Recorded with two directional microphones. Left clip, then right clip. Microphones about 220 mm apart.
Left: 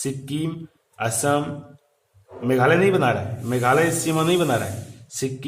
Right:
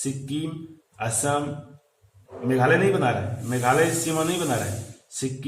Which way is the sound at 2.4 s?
30° left (ahead or behind).